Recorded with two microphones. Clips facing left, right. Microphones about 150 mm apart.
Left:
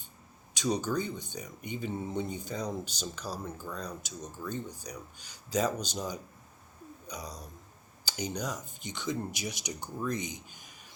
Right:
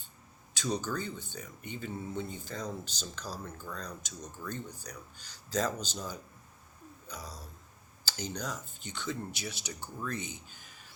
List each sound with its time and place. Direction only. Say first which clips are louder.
0.5 s speech: left 4 dB; 15° left (ahead or behind)